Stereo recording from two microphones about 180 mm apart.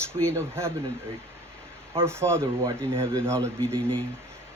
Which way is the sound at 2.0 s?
15° right (ahead or behind).